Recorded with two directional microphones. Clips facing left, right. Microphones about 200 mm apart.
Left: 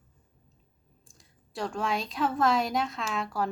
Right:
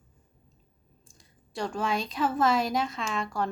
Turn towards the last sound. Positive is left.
turn(degrees=5)  # may be behind; listen again after turning